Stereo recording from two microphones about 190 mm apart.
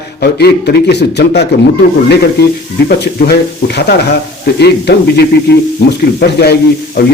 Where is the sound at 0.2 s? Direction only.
60° left (ahead or behind).